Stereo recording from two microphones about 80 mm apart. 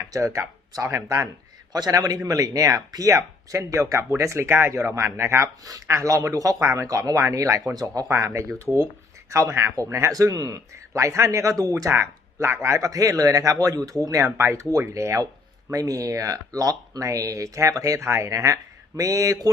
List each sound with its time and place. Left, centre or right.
0.1 s speech: right
1.7 s speech: right
5.6 s speech: right
7.7 s speech: right
8.0 s speech: right